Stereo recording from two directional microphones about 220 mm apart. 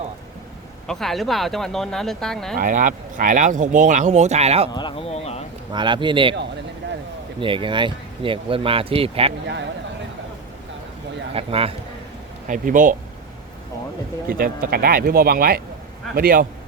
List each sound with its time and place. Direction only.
0.9 s speech: centre (ahead or behind)
2.6 s speech: 35° right (ahead or behind)
4.7 s speech: 20° left (ahead or behind)
5.7 s speech: 20° right (ahead or behind)
7.3 s speech: 25° right (ahead or behind)
11.3 s speech: 25° right (ahead or behind)
12.5 s speech: 35° right (ahead or behind)
14.3 s speech: 40° right (ahead or behind)